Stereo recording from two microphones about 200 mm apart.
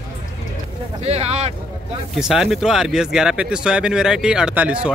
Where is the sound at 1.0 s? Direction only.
30° right (ahead or behind).